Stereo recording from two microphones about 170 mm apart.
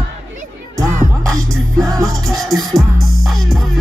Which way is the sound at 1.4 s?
Centre (ahead or behind).